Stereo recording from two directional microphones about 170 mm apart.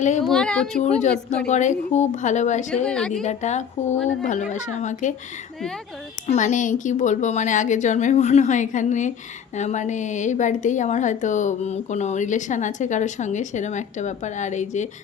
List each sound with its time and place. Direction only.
0.3 s speech: 5° left (ahead or behind)
0.8 s a woman's voice: 45° left (ahead or behind)
2.8 s speech: 5° left (ahead or behind)
3.2 s a woman's voice: 45° left (ahead or behind)
6.2 s a woman's voice: 45° left (ahead or behind)